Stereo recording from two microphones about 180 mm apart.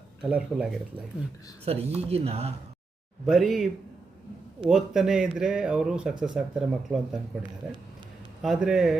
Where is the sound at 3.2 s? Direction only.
Centre (ahead or behind).